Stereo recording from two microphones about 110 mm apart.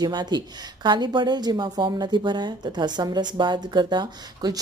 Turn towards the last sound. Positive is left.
turn(degrees=-40)  # may be behind; listen again after turning